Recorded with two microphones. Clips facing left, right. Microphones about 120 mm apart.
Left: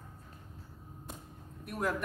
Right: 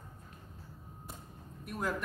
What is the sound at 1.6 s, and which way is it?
Speech, centre (ahead or behind).